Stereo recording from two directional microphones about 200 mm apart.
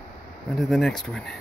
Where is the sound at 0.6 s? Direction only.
Centre (ahead or behind).